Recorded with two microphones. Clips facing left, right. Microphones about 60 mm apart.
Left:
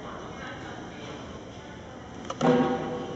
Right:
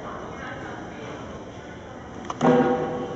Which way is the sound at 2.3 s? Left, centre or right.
Centre.